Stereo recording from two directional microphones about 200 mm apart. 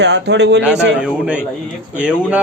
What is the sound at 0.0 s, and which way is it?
Speech, 60° right (ahead or behind).